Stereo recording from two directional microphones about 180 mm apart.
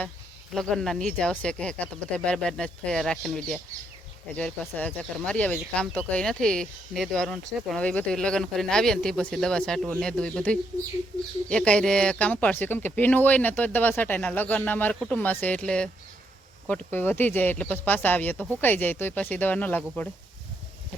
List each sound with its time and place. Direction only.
0.5 s speech: 5° left (ahead or behind)